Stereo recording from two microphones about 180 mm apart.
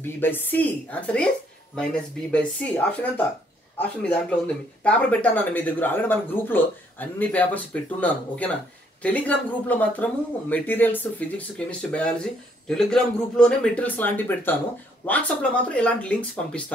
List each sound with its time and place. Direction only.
0.0 s speech: 10° left (ahead or behind)